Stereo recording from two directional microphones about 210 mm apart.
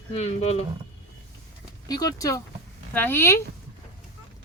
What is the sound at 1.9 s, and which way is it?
Speech, 20° left (ahead or behind).